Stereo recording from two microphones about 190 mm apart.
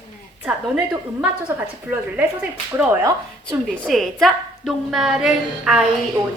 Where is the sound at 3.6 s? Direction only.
Centre (ahead or behind).